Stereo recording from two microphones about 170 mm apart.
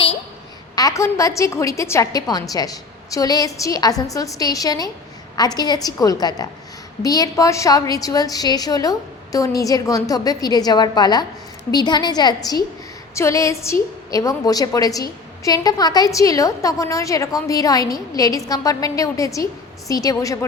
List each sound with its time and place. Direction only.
0.8 s a woman's voice: 20° left (ahead or behind)
13.1 s a sound: 15° left (ahead or behind)
14.1 s a woman's voice: 20° left (ahead or behind)